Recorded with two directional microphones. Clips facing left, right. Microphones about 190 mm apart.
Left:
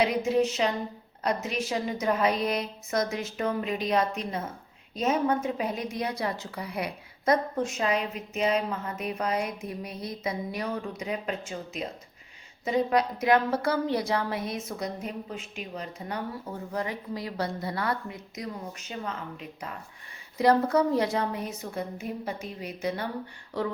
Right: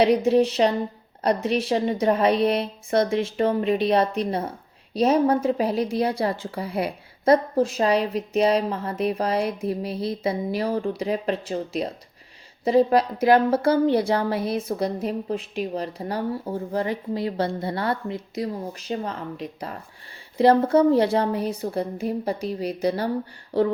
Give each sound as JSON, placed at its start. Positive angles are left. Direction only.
{"t": 0.0, "sound": "a woman's voice", "side_deg": -30}